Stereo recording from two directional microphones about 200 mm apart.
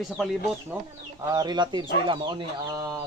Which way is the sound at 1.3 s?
20° right (ahead or behind).